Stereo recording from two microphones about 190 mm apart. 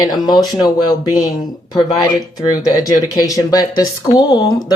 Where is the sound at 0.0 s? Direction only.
20° left (ahead or behind).